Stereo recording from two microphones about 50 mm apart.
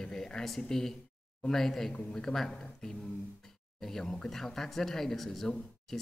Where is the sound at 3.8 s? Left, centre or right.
Centre.